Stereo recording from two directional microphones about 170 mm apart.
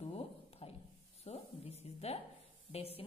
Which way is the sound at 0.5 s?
35° left (ahead or behind).